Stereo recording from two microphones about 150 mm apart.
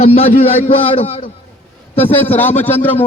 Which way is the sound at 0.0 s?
40° left (ahead or behind).